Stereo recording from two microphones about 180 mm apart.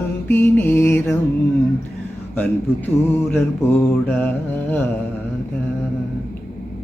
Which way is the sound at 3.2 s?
10° left (ahead or behind).